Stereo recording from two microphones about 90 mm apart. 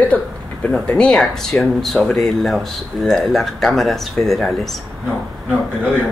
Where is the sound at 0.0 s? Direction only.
15° left (ahead or behind).